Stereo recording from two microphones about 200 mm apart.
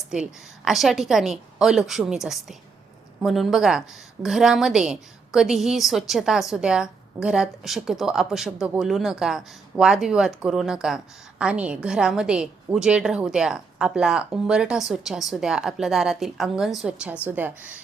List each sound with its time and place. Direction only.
0.1 s a woman's voice: 5° right (ahead or behind)